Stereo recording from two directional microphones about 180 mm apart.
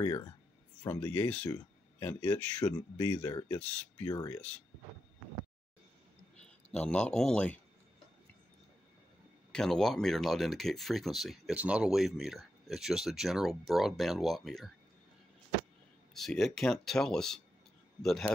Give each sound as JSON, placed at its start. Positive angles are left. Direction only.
{"t": 0.0, "sound": "speech", "side_deg": 20}
{"t": 6.3, "sound": "speech", "side_deg": 5}
{"t": 9.5, "sound": "speech", "side_deg": 5}
{"t": 16.2, "sound": "speech", "side_deg": 0}